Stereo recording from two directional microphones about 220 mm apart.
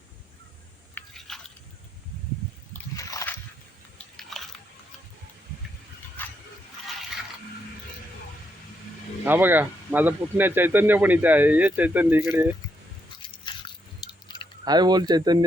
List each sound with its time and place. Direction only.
0.9 s biting: centre (ahead or behind)
2.7 s splash: 15° left (ahead or behind)
3.9 s biting: centre (ahead or behind)
6.2 s a sound: 10° left (ahead or behind)
9.2 s speech: 10° right (ahead or behind)
13.4 s biting: 20° left (ahead or behind)
14.6 s speech: 20° right (ahead or behind)